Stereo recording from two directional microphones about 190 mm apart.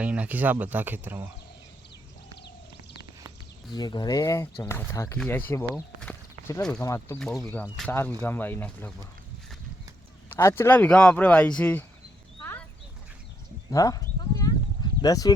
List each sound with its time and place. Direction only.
0.0 s speech: 5° right (ahead or behind)
3.8 s speech: 20° left (ahead or behind)
6.0 s clip-clop: 5° left (ahead or behind)
6.8 s speech: 15° left (ahead or behind)
7.2 s speech: 5° left (ahead or behind)
10.2 s speech: 15° left (ahead or behind)
12.4 s clip-clop: 5° left (ahead or behind)
13.7 s sheep: 20° left (ahead or behind)
15.0 s speech: 20° left (ahead or behind)